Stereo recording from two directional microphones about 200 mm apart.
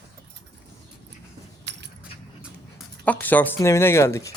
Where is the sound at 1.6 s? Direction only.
60° right (ahead or behind).